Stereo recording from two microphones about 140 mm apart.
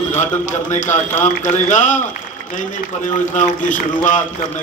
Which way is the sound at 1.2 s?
60° left (ahead or behind).